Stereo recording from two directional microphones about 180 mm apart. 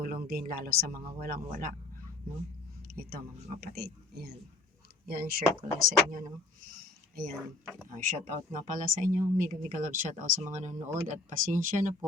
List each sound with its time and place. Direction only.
0.0 s speech: 55° right (ahead or behind)
2.8 s speech: 55° right (ahead or behind)
5.0 s speech: 55° right (ahead or behind)
7.9 s speech: 45° right (ahead or behind)
10.8 s speech: 15° right (ahead or behind)
11.1 s speech: 45° right (ahead or behind)